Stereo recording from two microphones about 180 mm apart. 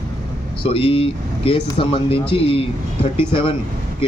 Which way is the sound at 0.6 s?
30° left (ahead or behind).